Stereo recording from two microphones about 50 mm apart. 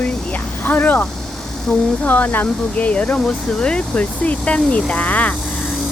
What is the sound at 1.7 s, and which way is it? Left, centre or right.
Speech, left.